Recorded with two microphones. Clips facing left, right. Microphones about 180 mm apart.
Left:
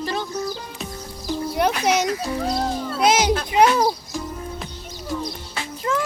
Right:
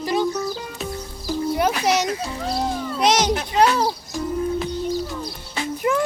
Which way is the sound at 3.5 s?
15° left (ahead or behind).